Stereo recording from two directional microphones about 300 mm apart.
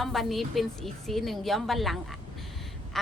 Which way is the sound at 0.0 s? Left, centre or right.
Centre.